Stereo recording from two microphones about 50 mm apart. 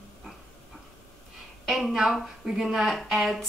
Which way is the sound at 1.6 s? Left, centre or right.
Centre.